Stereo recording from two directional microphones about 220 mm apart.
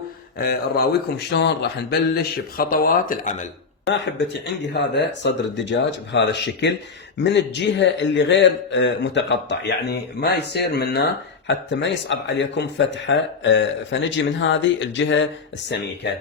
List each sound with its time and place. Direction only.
0.4 s a man's voice: 45° left (ahead or behind)
4.7 s a man's voice: 50° left (ahead or behind)